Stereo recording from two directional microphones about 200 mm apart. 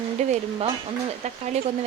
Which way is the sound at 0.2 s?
35° right (ahead or behind).